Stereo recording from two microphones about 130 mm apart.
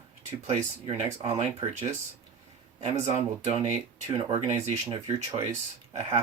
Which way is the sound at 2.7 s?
60° right (ahead or behind).